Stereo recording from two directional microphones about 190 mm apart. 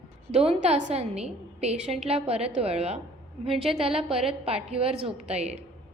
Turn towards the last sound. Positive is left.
turn(degrees=-35)  # may be behind; listen again after turning